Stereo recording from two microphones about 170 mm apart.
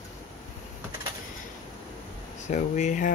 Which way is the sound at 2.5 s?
45° left (ahead or behind).